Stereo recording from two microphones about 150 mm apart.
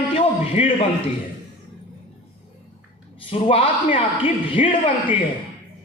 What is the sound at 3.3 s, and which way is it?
A man's voice, 40° left (ahead or behind).